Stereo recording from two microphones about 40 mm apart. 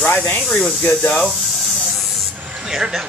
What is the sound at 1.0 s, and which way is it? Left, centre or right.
Speech, centre.